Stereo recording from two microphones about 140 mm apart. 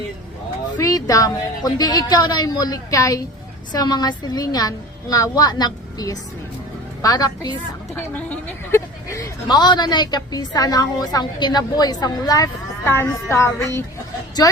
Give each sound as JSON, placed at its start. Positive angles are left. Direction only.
{"t": 0.8, "sound": "a woman's voice", "side_deg": 25}
{"t": 7.9, "sound": "a woman's voice", "side_deg": 15}
{"t": 12.8, "sound": "speech", "side_deg": 15}